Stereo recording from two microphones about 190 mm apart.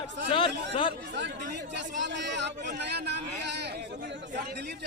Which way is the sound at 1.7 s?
65° right (ahead or behind).